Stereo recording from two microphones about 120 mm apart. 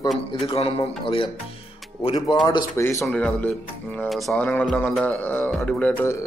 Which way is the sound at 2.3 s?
45° left (ahead or behind).